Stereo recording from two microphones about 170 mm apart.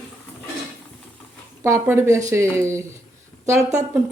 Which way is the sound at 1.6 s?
15° right (ahead or behind).